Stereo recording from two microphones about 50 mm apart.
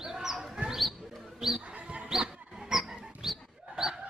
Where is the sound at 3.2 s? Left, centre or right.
Centre.